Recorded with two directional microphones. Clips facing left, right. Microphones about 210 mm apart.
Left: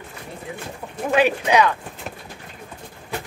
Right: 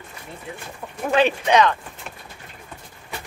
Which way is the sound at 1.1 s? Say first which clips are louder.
Even; 10° left (ahead or behind).